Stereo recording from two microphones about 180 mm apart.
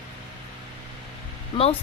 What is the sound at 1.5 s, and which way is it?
Speech, 25° left (ahead or behind).